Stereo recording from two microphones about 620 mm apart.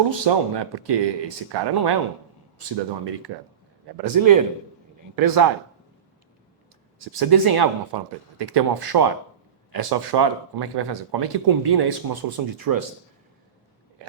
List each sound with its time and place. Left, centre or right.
0.1 s speech: right
7.2 s speech: right